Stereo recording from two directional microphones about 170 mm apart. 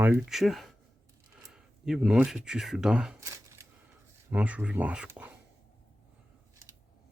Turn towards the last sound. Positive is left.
turn(degrees=-5)  # may be behind; listen again after turning